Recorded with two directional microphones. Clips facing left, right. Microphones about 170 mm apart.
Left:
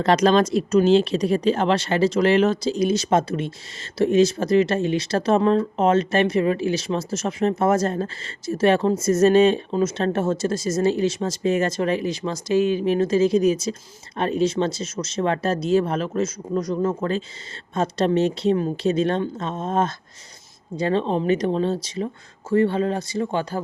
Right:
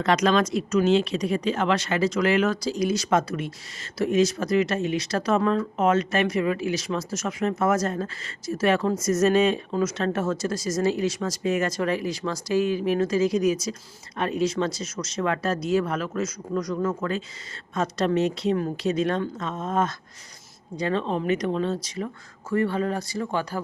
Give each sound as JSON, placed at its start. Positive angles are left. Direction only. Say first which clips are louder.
{"t": 0.0, "sound": "speech", "louder": "left 4 dB", "side_deg": 35}